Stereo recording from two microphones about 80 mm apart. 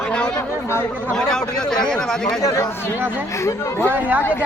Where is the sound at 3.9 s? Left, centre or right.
Right.